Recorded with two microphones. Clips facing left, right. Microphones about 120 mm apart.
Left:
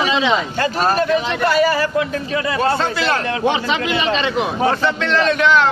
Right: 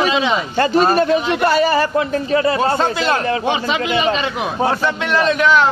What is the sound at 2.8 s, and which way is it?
Speech, 20° right (ahead or behind).